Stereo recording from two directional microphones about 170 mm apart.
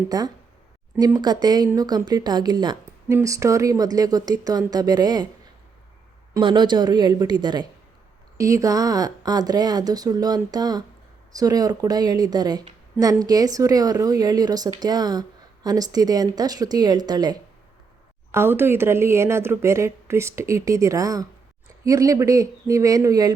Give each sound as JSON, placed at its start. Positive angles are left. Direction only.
{"t": 0.1, "sound": "a woman's voice", "side_deg": -20}
{"t": 6.3, "sound": "a woman's voice", "side_deg": -25}